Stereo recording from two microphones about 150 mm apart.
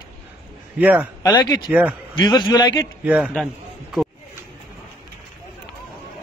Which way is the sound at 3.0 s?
5° right (ahead or behind).